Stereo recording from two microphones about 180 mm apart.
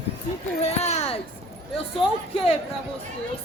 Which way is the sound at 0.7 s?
35° left (ahead or behind).